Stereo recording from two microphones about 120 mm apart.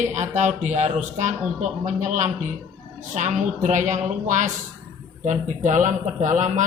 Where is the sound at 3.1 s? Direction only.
75° right (ahead or behind).